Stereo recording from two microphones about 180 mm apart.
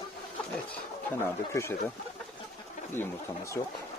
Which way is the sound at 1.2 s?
15° left (ahead or behind).